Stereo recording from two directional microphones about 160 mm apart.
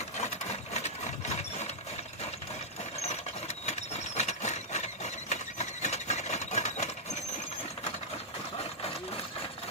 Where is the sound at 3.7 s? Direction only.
45° left (ahead or behind).